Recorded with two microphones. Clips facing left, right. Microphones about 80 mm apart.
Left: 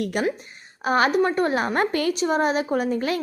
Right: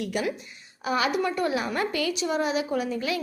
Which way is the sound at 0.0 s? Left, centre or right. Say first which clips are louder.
Left 4 dB; left.